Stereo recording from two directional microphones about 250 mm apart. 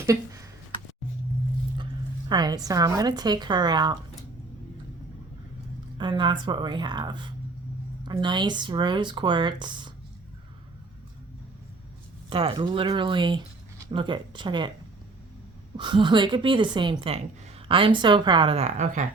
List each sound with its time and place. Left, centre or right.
0.0 s a sound: centre
2.3 s speech: centre
6.0 s speech: centre
12.3 s speech: right
15.8 s speech: centre